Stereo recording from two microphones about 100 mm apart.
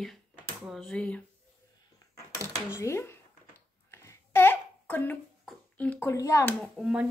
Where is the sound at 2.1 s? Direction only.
20° left (ahead or behind).